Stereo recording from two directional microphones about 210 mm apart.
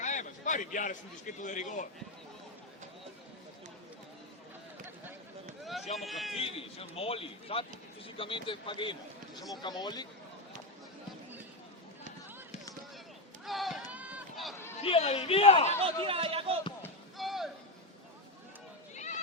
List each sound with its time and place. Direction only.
0.0 s a sound: 35° left (ahead or behind)
1.4 s a man's voice: 35° left (ahead or behind)
5.6 s run: centre (ahead or behind)
6.0 s speech: centre (ahead or behind)
6.4 s a man's voice: 25° left (ahead or behind)
13.4 s run: centre (ahead or behind)
14.8 s a man's voice: 30° left (ahead or behind)
16.0 s speech: 25° right (ahead or behind)
16.8 s a sound: centre (ahead or behind)
18.9 s a sound: 35° left (ahead or behind)